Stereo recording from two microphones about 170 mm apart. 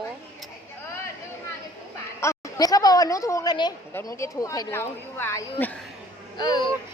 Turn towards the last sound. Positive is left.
turn(degrees=25)  # may be behind; listen again after turning